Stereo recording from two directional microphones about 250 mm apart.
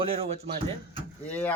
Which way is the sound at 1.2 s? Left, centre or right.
Centre.